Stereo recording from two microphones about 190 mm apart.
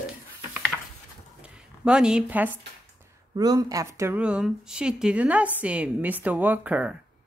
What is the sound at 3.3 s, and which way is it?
Speech, 20° right (ahead or behind).